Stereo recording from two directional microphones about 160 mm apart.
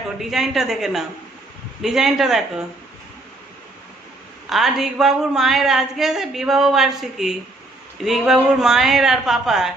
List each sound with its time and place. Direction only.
0.2 s speech: centre (ahead or behind)
4.4 s speech: centre (ahead or behind)